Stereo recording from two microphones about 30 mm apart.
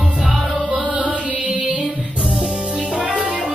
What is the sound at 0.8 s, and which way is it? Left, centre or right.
Music, right.